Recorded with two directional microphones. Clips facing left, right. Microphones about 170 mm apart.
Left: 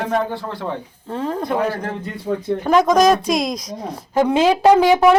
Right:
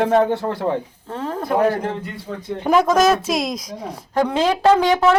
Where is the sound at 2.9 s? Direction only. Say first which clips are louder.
Left 2 dB; 5° right (ahead or behind).